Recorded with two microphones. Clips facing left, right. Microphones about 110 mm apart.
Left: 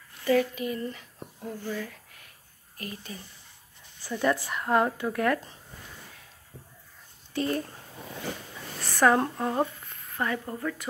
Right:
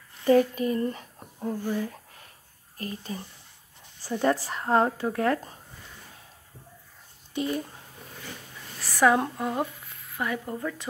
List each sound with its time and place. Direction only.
0.3 s speech: 40° right (ahead or behind)
1.6 s a woman's voice: 15° right (ahead or behind)
2.8 s speech: 35° right (ahead or behind)
7.3 s a woman's voice: 15° right (ahead or behind)
8.9 s a woman's voice: 10° right (ahead or behind)
9.8 s a sound: 5° right (ahead or behind)